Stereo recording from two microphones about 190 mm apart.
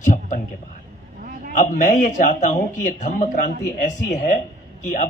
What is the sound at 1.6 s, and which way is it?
A man's voice, 45° left (ahead or behind).